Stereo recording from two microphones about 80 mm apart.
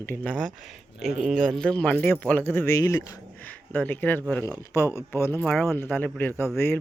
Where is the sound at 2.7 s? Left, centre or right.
Left.